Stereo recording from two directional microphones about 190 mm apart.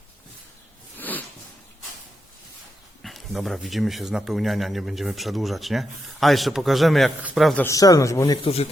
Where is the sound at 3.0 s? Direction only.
Centre (ahead or behind).